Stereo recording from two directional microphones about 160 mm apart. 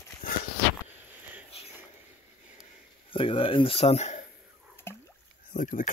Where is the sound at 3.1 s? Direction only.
35° left (ahead or behind).